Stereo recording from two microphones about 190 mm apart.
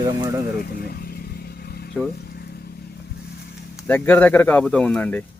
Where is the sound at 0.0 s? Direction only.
20° right (ahead or behind).